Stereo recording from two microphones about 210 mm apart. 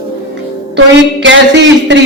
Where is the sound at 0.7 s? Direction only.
60° right (ahead or behind).